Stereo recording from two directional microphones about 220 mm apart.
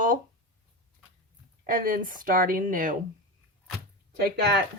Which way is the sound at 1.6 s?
40° right (ahead or behind).